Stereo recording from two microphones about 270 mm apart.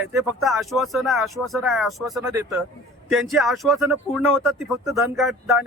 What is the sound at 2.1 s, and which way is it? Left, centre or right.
Speech, centre.